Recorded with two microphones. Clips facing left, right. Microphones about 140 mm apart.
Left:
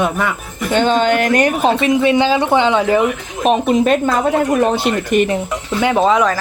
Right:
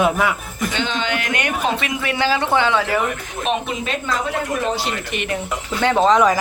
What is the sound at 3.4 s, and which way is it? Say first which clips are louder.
Speech: left 9 dB; 40° left (ahead or behind).